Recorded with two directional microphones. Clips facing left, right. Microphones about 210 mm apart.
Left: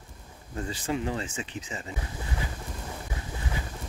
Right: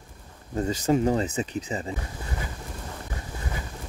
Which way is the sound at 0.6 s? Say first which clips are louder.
Right 8 dB; 40° right (ahead or behind).